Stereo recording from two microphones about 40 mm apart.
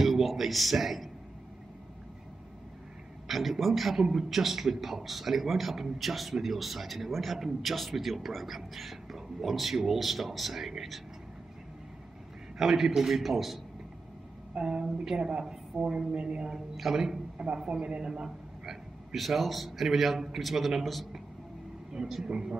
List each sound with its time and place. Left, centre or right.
0.0 s speech: centre
3.3 s a man's voice: centre
12.5 s a man's voice: centre
14.6 s a woman's voice: centre
17.4 s a man's voice: right
19.1 s a man's voice: centre
22.2 s a woman's voice: right